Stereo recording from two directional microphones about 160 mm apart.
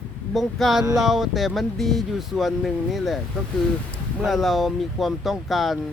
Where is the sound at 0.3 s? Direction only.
Centre (ahead or behind).